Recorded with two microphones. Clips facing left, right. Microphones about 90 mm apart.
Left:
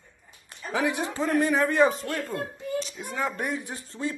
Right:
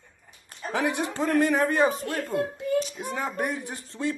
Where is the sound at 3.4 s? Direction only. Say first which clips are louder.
Right 2 dB; 55° right (ahead or behind).